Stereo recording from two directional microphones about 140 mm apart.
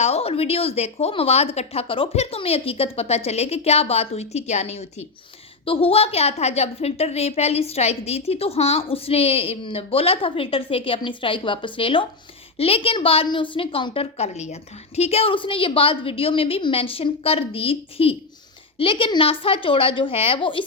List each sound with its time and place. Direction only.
0.0 s a woman's voice: 45° left (ahead or behind)